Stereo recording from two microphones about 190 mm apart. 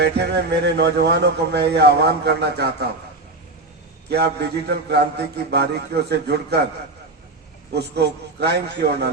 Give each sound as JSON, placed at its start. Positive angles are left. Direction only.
{"t": 0.0, "sound": "speech", "side_deg": -60}
{"t": 4.1, "sound": "speech", "side_deg": -60}
{"t": 7.7, "sound": "speech", "side_deg": -60}